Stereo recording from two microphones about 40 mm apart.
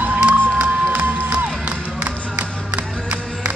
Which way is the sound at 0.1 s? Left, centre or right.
Right.